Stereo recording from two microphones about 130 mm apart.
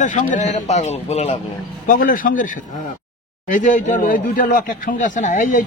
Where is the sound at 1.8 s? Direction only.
90° left.